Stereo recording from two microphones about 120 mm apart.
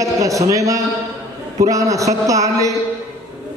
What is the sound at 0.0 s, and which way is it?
A man's voice, 25° right (ahead or behind).